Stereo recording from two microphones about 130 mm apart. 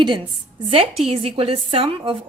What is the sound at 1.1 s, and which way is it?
A woman's voice, 50° right (ahead or behind).